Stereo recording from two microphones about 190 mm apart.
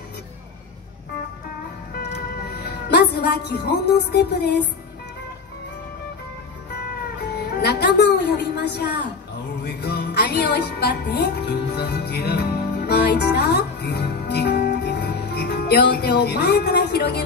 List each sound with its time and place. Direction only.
2.0 s music: 60° left (ahead or behind)
7.6 s music: 60° left (ahead or behind)